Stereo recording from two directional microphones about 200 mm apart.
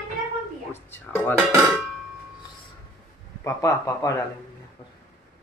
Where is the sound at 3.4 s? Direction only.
15° left (ahead or behind).